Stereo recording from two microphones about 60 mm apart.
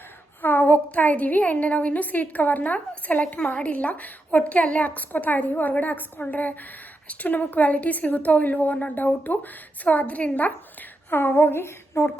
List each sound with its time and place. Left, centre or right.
0.4 s a woman's voice: left